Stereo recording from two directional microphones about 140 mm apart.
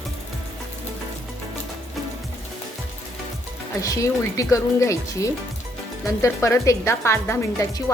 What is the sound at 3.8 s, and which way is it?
A woman's voice, 25° left (ahead or behind).